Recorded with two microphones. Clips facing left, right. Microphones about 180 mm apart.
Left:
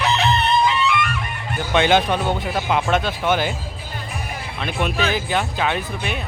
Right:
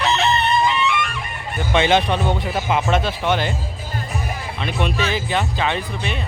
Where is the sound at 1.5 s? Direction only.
Centre (ahead or behind).